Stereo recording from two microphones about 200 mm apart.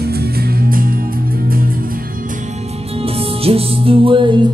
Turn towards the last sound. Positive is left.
turn(degrees=-25)  # may be behind; listen again after turning